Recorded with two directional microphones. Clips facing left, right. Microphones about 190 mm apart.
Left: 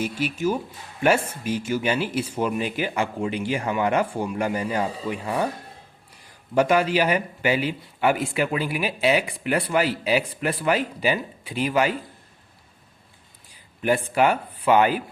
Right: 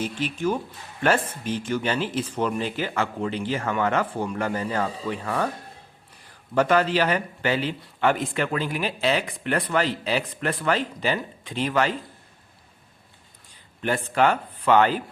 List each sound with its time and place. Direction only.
0.0 s speech: 10° left (ahead or behind)
6.5 s speech: 10° left (ahead or behind)
13.5 s speech: 10° left (ahead or behind)